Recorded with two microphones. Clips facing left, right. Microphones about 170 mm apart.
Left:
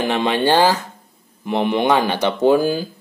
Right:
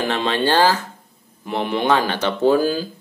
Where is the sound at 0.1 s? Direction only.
15° left (ahead or behind).